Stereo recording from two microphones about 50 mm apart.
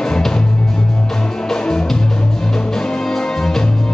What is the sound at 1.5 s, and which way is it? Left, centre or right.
Music, centre.